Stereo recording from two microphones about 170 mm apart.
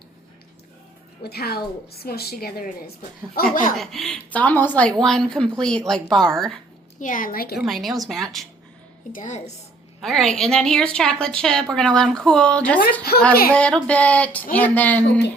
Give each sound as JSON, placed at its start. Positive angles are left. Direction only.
{"t": 1.2, "sound": "a woman's voice", "side_deg": 65}
{"t": 3.8, "sound": "a woman's voice", "side_deg": 0}
{"t": 7.0, "sound": "a woman's voice", "side_deg": 50}
{"t": 7.6, "sound": "a woman's voice", "side_deg": 0}
{"t": 9.1, "sound": "a woman's voice", "side_deg": 45}
{"t": 10.0, "sound": "a woman's voice", "side_deg": 0}
{"t": 13.5, "sound": "a sound", "side_deg": 5}